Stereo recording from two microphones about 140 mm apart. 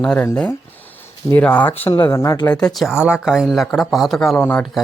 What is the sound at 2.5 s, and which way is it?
Speech, 5° left (ahead or behind).